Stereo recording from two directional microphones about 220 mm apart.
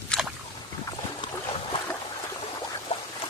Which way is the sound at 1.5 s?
25° left (ahead or behind).